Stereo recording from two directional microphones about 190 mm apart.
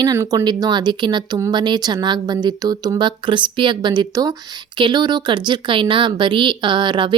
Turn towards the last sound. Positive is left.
turn(degrees=-25)  # may be behind; listen again after turning